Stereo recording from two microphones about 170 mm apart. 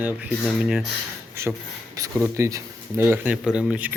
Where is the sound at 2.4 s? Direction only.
15° right (ahead or behind).